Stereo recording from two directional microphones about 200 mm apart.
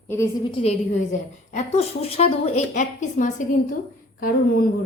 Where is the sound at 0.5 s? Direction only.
30° left (ahead or behind).